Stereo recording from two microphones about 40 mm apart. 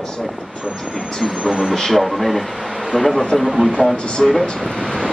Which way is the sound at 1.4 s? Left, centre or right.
Centre.